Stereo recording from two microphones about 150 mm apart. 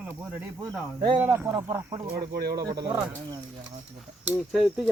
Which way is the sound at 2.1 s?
90° right.